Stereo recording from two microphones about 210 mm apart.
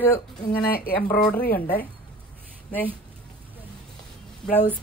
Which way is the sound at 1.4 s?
45° left (ahead or behind).